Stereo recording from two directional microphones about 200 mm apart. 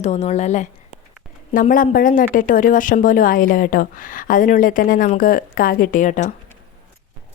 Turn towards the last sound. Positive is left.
turn(degrees=40)  # may be behind; listen again after turning